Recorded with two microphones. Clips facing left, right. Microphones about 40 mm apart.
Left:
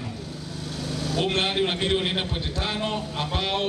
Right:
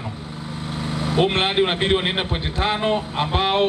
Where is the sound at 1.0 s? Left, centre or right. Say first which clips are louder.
Right 5 dB; right.